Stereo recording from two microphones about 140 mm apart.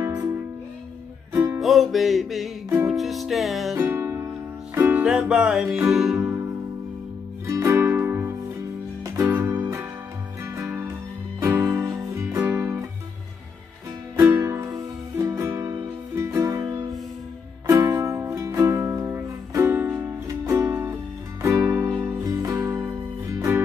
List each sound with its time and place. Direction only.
0.0 s music: 20° right (ahead or behind)
1.6 s music: centre (ahead or behind)
3.7 s music: 20° right (ahead or behind); by 6.2 s centre (ahead or behind)
7.4 s music: 20° right (ahead or behind)
14.1 s music: 20° right (ahead or behind)